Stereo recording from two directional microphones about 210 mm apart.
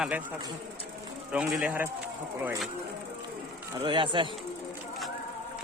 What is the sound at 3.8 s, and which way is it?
Speech, 25° right (ahead or behind).